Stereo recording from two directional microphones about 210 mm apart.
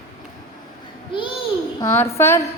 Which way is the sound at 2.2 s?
10° left (ahead or behind).